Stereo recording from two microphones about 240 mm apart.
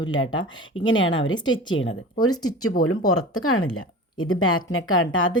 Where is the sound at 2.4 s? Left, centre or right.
Left.